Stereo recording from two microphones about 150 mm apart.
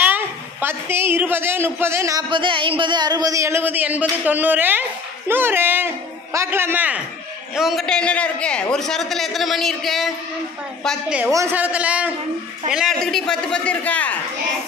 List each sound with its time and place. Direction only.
0.0 s a woman's voice: 15° right (ahead or behind)
7.5 s a man's voice: centre (ahead or behind)
11.1 s a woman's voice: 20° right (ahead or behind)
13.0 s a man's voice: 5° left (ahead or behind)